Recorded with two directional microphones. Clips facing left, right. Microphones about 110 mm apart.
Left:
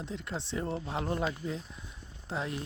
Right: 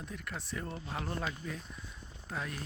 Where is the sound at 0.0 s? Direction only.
25° left (ahead or behind).